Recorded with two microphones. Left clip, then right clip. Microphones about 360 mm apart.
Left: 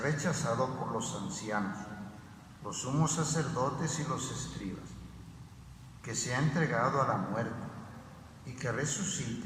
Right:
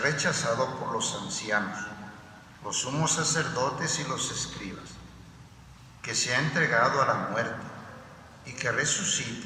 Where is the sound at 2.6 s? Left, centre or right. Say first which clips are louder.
Right 6 dB; right.